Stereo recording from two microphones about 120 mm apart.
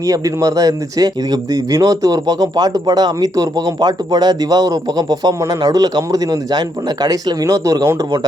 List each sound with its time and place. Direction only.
0.0 s speech: 30° right (ahead or behind)